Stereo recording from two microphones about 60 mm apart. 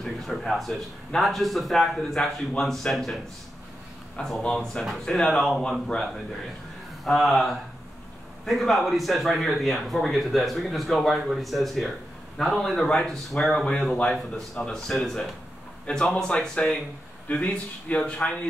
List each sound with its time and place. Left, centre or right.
0.0 s speech: centre
4.4 s speech: centre
7.1 s speech: centre